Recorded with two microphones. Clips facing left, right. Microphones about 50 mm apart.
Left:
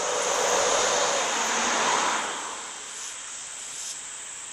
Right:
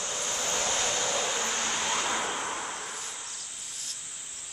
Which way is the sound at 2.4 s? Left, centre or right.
Right.